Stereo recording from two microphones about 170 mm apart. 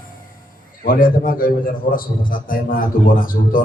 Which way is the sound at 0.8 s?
55° left (ahead or behind).